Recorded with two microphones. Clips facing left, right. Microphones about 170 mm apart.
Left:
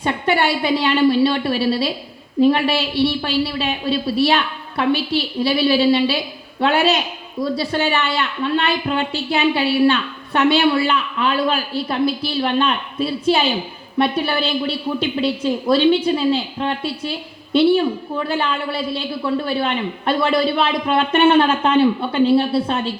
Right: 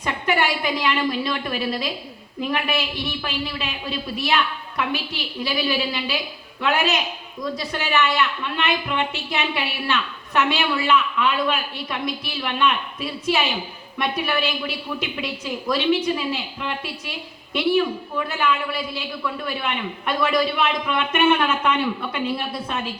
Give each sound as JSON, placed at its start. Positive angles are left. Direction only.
{"t": 0.0, "sound": "a woman's voice", "side_deg": 30}